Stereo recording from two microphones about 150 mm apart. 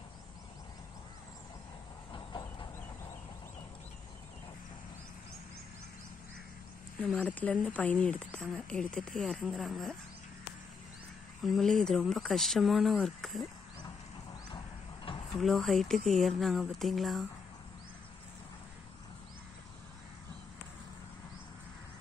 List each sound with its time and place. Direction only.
2.1 s train: 30° left (ahead or behind)
7.0 s speech: 10° left (ahead or behind)
11.4 s speech: centre (ahead or behind)
15.1 s a sound: 35° left (ahead or behind)
15.4 s speech: centre (ahead or behind)